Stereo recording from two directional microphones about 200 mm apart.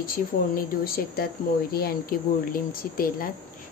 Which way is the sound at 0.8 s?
50° left (ahead or behind).